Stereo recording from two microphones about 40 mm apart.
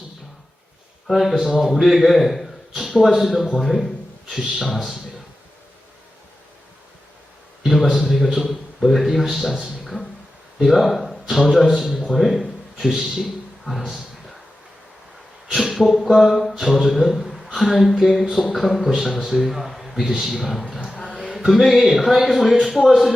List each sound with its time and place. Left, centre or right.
1.1 s a man's voice: centre
3.6 s a sound: centre
4.4 s a man's voice: centre
7.6 s a sound: centre
8.0 s a man's voice: centre
13.7 s speech: centre
15.5 s a man's voice: centre